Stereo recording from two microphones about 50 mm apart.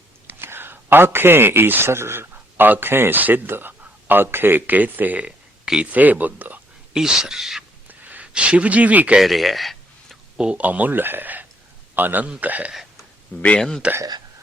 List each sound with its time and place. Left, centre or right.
0.3 s speech: right
6.9 s speech: centre
7.9 s gasp: right
8.3 s speech: right
9.2 s a sound: centre
10.3 s speech: centre
10.6 s a man's voice: right
13.6 s speech: centre